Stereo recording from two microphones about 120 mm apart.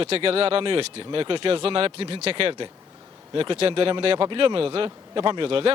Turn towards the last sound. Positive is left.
turn(degrees=-50)  # may be behind; listen again after turning